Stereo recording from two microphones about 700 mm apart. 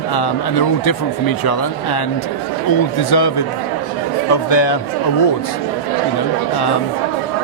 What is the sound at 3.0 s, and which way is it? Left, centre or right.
Speech, left.